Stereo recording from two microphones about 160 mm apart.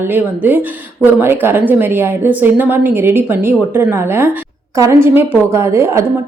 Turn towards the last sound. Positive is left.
turn(degrees=-15)  # may be behind; listen again after turning